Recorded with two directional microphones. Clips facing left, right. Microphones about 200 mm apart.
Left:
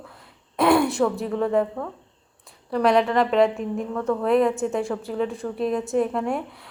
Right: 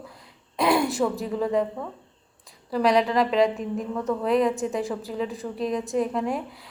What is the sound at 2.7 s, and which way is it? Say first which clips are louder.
A woman's voice: left 2 dB; centre (ahead or behind).